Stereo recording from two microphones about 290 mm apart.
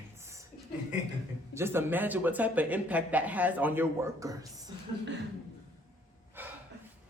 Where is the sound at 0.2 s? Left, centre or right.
Centre.